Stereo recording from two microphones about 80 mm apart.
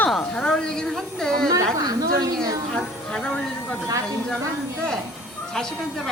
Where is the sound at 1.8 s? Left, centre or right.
Right.